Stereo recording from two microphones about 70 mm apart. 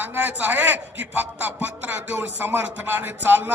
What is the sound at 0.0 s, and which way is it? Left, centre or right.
A man's voice, right.